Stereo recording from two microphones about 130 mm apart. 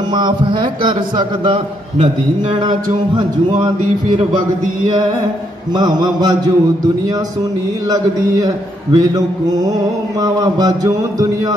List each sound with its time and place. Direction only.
0.1 s a man's voice: 35° right (ahead or behind)
5.8 s a man's voice: 30° right (ahead or behind)
7.9 s a man's voice: 30° right (ahead or behind)